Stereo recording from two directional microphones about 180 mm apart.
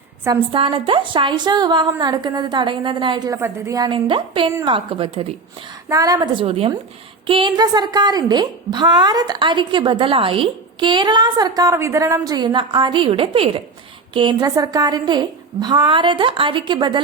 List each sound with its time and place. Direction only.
0.5 s a woman's voice: 30° right (ahead or behind)